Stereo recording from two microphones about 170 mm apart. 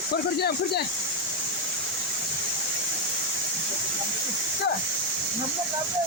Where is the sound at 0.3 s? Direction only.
70° left (ahead or behind).